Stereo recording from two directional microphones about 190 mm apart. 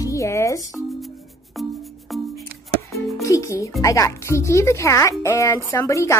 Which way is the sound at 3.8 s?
15° left (ahead or behind).